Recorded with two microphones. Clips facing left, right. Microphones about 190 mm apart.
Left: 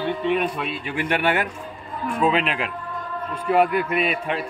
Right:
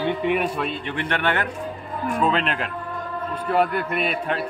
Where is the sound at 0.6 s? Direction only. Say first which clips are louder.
Even; 5° left (ahead or behind).